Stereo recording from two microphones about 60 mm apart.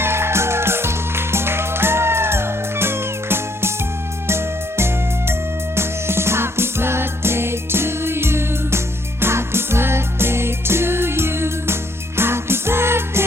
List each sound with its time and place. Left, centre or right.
0.0 s music: right